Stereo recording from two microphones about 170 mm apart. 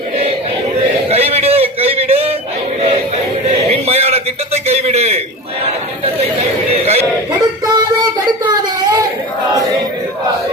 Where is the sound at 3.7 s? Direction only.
40° right (ahead or behind).